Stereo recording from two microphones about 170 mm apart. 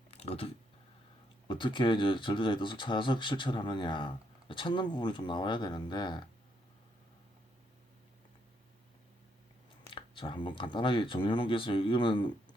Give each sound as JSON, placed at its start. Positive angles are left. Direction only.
{"t": 0.1, "sound": "a sound", "side_deg": 35}
{"t": 1.5, "sound": "speech", "side_deg": 30}
{"t": 9.9, "sound": "speech", "side_deg": 30}